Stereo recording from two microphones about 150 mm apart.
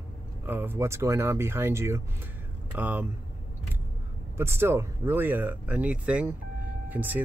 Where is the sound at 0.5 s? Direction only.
15° right (ahead or behind).